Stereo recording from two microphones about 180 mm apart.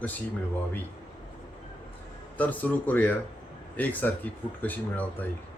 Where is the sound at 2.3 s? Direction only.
10° left (ahead or behind).